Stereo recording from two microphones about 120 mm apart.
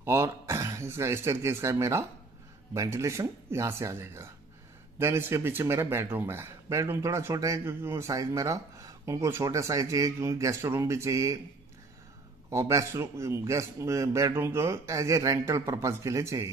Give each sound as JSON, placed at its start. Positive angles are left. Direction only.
{"t": 0.0, "sound": "speech", "side_deg": -25}
{"t": 12.4, "sound": "speech", "side_deg": -25}